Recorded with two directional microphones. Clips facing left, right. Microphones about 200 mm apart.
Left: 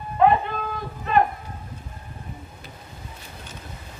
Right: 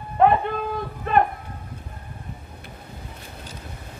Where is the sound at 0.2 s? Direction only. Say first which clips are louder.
Right 1 dB; 55° right (ahead or behind).